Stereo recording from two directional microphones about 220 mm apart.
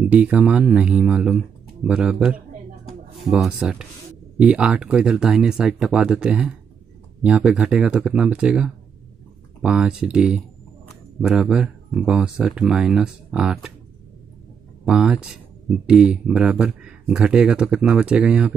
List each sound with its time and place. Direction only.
0.0 s speech: 5° right (ahead or behind)
14.9 s speech: 5° right (ahead or behind)